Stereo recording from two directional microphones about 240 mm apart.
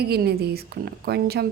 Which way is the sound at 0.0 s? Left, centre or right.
Right.